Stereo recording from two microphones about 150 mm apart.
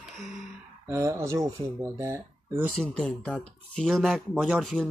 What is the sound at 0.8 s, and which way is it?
Speech, 20° right (ahead or behind).